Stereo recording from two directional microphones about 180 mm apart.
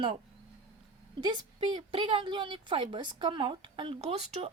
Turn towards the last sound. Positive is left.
turn(degrees=-35)  # may be behind; listen again after turning